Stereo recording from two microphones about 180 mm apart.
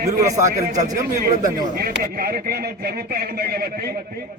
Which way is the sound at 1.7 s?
55° right (ahead or behind).